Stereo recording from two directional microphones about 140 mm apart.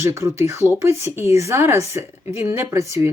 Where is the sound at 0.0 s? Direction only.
20° right (ahead or behind).